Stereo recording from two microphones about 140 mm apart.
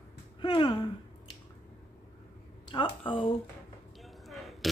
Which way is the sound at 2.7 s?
35° left (ahead or behind).